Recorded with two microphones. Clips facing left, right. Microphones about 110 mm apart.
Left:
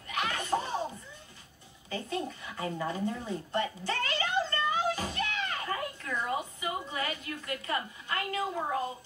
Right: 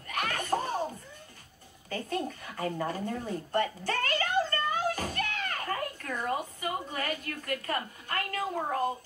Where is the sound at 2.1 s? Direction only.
45° right (ahead or behind).